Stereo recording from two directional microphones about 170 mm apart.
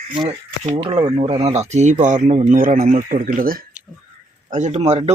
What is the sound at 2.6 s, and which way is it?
Speech, 55° right (ahead or behind).